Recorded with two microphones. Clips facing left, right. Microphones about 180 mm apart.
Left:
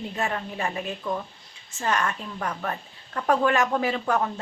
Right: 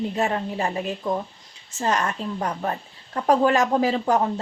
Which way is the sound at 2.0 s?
20° right (ahead or behind).